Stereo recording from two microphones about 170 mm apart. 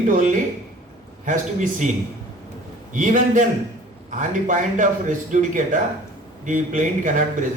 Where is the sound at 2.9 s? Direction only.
50° right (ahead or behind).